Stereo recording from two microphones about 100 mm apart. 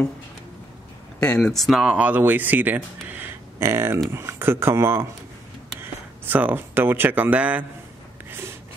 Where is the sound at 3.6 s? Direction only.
25° right (ahead or behind).